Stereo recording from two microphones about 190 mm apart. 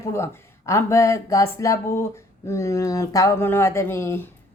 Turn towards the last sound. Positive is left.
turn(degrees=15)  # may be behind; listen again after turning